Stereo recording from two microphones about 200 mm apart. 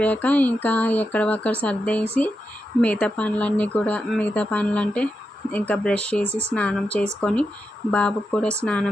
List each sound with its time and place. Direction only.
0.0 s speech: 10° left (ahead or behind)